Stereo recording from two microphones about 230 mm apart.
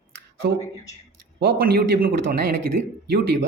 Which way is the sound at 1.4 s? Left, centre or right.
Right.